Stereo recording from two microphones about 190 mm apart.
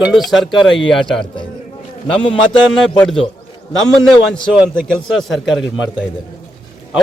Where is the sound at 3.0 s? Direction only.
Centre (ahead or behind).